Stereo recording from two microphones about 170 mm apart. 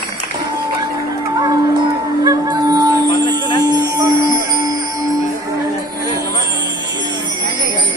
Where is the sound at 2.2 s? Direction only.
25° right (ahead or behind).